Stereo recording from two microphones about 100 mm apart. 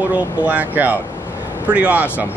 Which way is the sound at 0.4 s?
15° right (ahead or behind).